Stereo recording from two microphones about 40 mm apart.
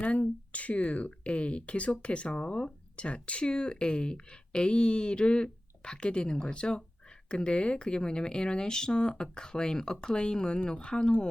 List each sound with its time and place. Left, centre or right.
0.0 s speech: left